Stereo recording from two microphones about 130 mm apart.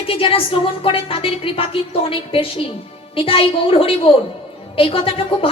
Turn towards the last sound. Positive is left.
turn(degrees=45)  # may be behind; listen again after turning